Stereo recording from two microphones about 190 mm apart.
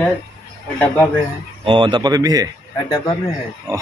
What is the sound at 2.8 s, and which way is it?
Speech, 20° left (ahead or behind).